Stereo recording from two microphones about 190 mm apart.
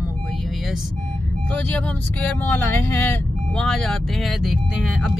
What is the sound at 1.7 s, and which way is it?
Speech, 5° left (ahead or behind).